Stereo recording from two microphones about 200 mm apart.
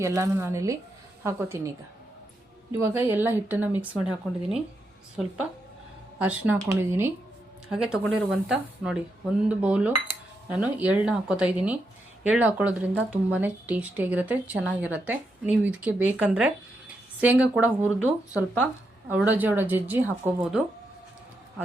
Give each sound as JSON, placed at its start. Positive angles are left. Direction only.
{"t": 0.0, "sound": "speech", "side_deg": -15}
{"t": 2.7, "sound": "speech", "side_deg": -10}